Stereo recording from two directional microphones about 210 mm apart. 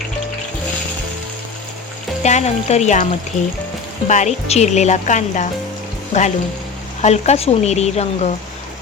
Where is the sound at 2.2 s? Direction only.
30° left (ahead or behind).